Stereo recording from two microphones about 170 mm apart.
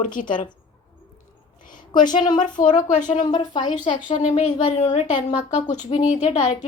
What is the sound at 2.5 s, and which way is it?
Speech, 50° left (ahead or behind).